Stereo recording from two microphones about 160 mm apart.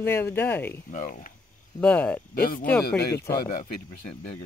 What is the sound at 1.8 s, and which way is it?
Speech, 10° left (ahead or behind).